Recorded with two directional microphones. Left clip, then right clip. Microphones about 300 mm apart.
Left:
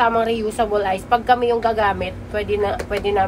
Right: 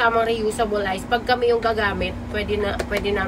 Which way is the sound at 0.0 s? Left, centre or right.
Centre.